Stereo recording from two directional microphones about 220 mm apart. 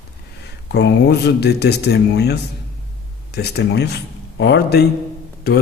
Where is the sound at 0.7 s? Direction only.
50° left (ahead or behind).